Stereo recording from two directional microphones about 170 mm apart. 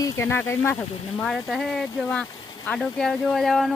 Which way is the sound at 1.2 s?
Centre (ahead or behind).